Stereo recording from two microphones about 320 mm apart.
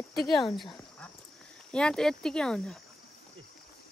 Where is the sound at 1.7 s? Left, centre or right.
Centre.